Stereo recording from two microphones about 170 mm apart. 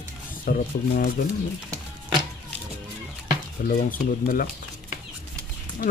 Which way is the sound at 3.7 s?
55° left (ahead or behind).